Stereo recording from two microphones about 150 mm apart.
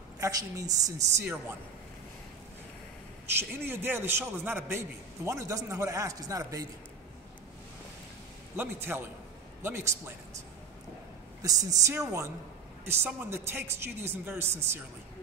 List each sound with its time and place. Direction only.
0.2 s a woman's voice: 25° right (ahead or behind)
3.3 s a man's voice: 15° right (ahead or behind)
8.5 s a man's voice: 15° right (ahead or behind)
11.4 s a woman's voice: 25° right (ahead or behind)